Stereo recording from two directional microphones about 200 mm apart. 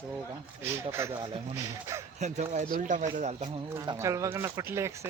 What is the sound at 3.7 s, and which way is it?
Speech, 15° right (ahead or behind).